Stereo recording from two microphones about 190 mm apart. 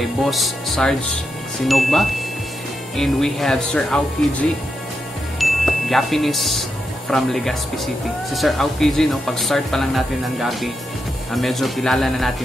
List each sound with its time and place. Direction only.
0.0 s speech: centre (ahead or behind)
5.4 s chime: centre (ahead or behind)
7.1 s speech: centre (ahead or behind)